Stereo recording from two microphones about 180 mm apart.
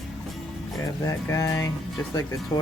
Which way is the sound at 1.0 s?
15° left (ahead or behind).